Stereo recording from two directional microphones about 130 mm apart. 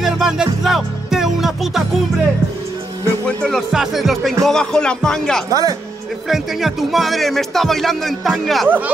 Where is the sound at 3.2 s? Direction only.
5° left (ahead or behind).